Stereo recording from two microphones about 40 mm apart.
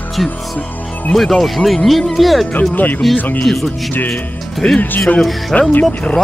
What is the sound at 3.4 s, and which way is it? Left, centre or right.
Speech, centre.